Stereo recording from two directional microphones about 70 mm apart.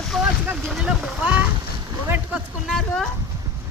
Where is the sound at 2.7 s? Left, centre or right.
Centre.